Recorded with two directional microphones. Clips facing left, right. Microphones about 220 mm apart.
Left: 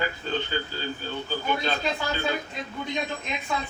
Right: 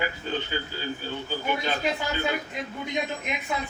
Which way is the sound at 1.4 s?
10° right (ahead or behind).